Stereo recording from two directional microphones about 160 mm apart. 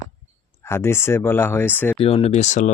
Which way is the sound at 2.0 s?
40° left (ahead or behind).